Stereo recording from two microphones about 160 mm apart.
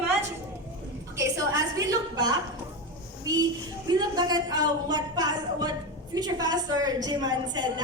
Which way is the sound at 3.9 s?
25° right (ahead or behind).